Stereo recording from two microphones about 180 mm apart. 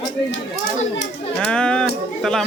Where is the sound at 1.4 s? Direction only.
5° left (ahead or behind).